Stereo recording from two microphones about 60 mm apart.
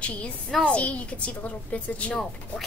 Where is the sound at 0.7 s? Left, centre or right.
Centre.